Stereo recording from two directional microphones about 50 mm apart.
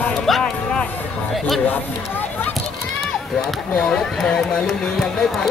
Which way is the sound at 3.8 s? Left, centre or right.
Centre.